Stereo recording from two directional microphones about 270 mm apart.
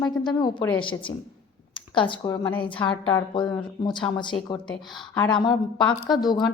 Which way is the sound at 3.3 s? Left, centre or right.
Centre.